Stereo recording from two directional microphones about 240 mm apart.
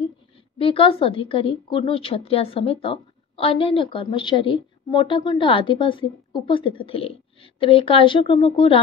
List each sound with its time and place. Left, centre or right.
0.6 s a woman's voice: left